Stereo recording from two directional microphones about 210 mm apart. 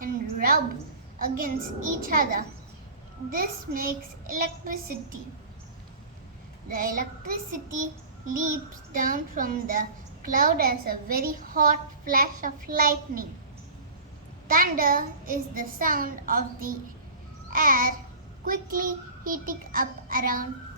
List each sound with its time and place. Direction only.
0.0 s a sound: 45° right (ahead or behind)
1.2 s a child's voice: 40° right (ahead or behind)
6.7 s a child's voice: 40° right (ahead or behind)
9.0 s a child's voice: 40° right (ahead or behind)
14.4 s a child's voice: 45° right (ahead or behind)